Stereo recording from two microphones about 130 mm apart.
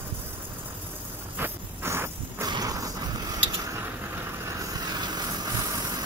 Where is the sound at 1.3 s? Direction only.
15° right (ahead or behind).